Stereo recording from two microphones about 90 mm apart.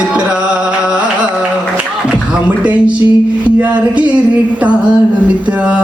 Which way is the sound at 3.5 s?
15° right (ahead or behind).